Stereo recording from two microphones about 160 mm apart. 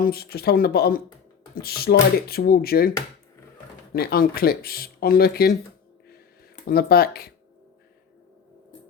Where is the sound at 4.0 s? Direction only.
70° left (ahead or behind).